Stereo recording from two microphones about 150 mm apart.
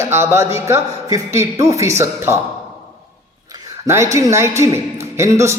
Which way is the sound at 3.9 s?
20° right (ahead or behind).